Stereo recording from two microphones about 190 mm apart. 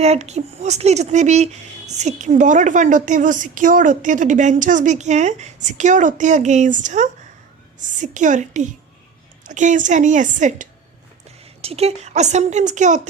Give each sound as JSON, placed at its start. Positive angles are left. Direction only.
{"t": 0.0, "sound": "speech", "side_deg": -35}